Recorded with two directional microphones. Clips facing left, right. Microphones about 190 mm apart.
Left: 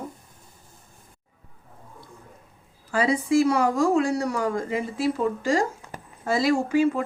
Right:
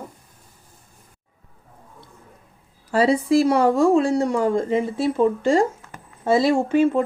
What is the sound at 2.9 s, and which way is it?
Speech, 35° right (ahead or behind).